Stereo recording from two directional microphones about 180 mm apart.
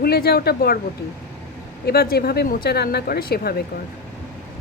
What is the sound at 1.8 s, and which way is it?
Speech, 60° left (ahead or behind).